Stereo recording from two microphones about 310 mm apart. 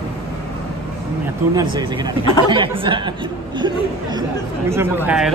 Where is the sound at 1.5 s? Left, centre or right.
Centre.